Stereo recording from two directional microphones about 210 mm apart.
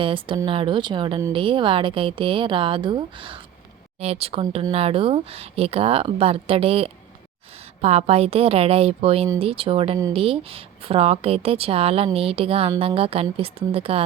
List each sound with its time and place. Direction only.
0.0 s speech: 25° right (ahead or behind)